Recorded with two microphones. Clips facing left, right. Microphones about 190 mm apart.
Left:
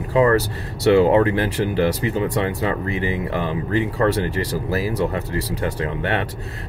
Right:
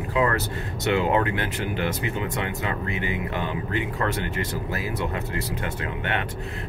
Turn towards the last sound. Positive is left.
turn(degrees=35)  # may be behind; listen again after turning